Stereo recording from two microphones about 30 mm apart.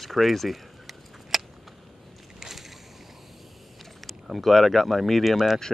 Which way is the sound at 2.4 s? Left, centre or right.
Centre.